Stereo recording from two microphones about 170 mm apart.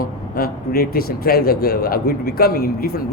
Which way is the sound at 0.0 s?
60° left (ahead or behind).